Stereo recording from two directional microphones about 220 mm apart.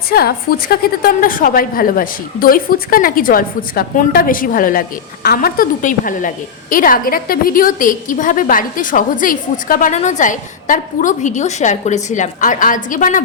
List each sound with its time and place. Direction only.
0.1 s a woman's voice: 45° left (ahead or behind)